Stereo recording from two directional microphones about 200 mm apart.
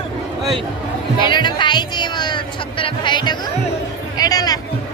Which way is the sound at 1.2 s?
25° left (ahead or behind).